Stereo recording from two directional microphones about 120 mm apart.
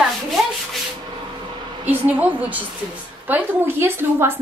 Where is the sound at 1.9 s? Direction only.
15° right (ahead or behind).